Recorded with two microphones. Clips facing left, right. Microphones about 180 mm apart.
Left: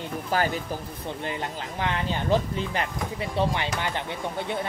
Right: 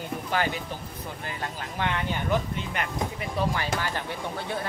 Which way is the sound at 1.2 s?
25° left (ahead or behind).